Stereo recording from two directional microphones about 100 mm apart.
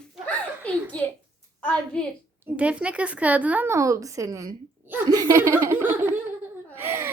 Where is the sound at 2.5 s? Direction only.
15° right (ahead or behind).